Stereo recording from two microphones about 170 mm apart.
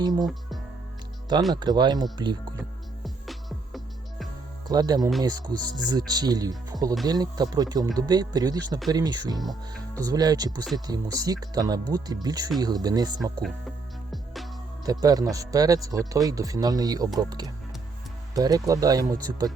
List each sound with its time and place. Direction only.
0.0 s speech: 25° right (ahead or behind)
1.5 s speech: 25° right (ahead or behind)
3.0 s music: centre (ahead or behind)
4.7 s speech: 25° right (ahead or behind)
13.4 s music: centre (ahead or behind)
14.8 s speech: 20° right (ahead or behind)